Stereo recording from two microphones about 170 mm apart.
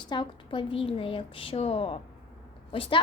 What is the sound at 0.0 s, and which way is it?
Speech, 30° left (ahead or behind).